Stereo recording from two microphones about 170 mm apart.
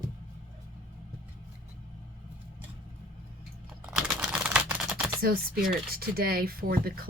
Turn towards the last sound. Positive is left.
turn(degrees=-60)  # may be behind; listen again after turning